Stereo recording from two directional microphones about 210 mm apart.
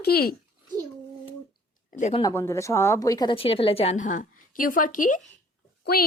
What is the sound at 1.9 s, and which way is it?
Speech, 35° left (ahead or behind).